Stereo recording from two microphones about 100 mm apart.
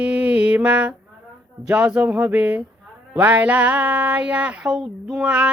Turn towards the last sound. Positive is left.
turn(degrees=-10)  # may be behind; listen again after turning